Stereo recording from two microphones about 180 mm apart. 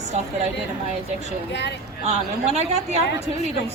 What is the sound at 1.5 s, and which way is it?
Speech, 70° left (ahead or behind).